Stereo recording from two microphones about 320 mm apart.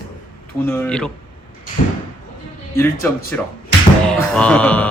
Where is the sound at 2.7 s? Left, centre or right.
Centre.